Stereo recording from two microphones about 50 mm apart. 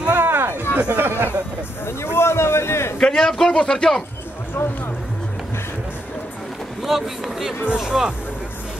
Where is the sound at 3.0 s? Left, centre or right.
Centre.